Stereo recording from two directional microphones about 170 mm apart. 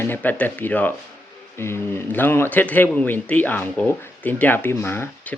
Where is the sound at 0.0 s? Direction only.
10° left (ahead or behind).